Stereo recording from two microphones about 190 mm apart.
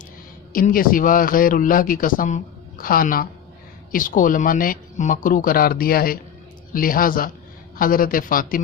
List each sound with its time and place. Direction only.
0.5 s a man's voice: 50° left (ahead or behind)